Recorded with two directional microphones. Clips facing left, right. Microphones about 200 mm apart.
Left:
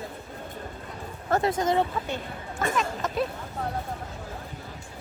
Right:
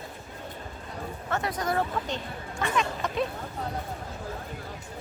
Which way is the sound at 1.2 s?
35° left (ahead or behind).